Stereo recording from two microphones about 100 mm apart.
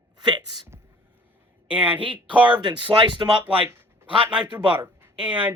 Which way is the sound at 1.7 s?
15° right (ahead or behind).